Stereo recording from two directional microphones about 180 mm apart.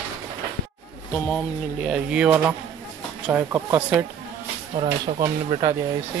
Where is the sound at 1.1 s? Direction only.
5° left (ahead or behind); by 4.0 s 10° right (ahead or behind).